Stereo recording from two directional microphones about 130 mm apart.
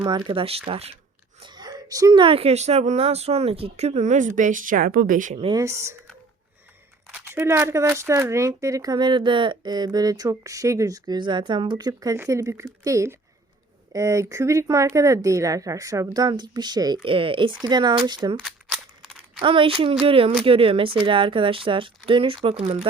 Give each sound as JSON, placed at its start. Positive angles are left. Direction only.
{"t": 0.0, "sound": "speech", "side_deg": -40}
{"t": 1.4, "sound": "speech", "side_deg": -35}
{"t": 5.5, "sound": "speech", "side_deg": -20}
{"t": 7.1, "sound": "speech", "side_deg": -15}
{"t": 17.0, "sound": "speech", "side_deg": -45}
{"t": 18.3, "sound": "a sound", "side_deg": -5}
{"t": 19.4, "sound": "speech", "side_deg": -45}